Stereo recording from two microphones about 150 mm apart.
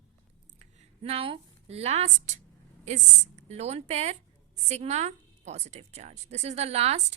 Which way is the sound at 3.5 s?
45° right (ahead or behind).